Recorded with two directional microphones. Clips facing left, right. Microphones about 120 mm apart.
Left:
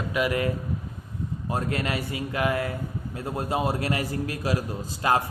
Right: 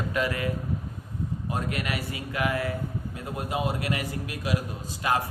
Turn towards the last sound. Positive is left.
turn(degrees=30)  # may be behind; listen again after turning